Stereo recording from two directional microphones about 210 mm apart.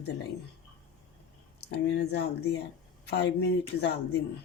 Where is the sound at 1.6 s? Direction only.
50° left (ahead or behind).